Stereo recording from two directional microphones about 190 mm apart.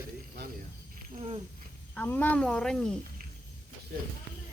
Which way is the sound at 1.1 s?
30° right (ahead or behind).